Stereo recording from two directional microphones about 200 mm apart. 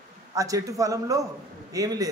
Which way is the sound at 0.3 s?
15° right (ahead or behind).